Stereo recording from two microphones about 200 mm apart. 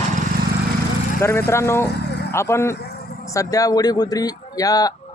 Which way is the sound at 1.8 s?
55° left (ahead or behind).